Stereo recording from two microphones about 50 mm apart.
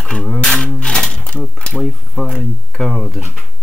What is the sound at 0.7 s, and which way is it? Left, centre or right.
Sewing machine, centre.